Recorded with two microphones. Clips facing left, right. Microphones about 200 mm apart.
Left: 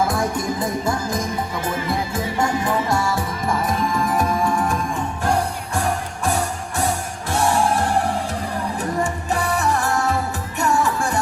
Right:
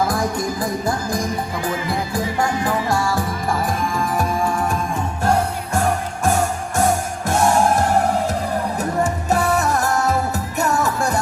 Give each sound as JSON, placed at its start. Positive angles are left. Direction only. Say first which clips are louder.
{"t": 0.1, "sound": "music", "louder": "right 1 dB", "side_deg": 25}
{"t": 7.3, "sound": "music", "louder": "right 3 dB", "side_deg": -45}